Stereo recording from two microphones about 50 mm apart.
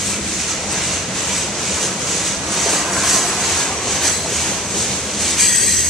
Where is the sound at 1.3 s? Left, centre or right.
Centre.